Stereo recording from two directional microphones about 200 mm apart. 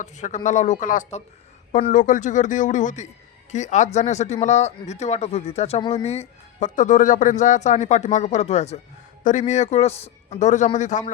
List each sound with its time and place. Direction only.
0.0 s speech: 35° left (ahead or behind)